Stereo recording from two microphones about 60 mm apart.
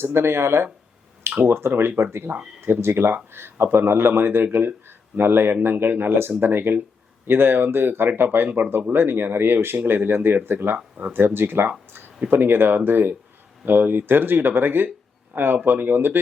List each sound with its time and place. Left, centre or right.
0.0 s speech: right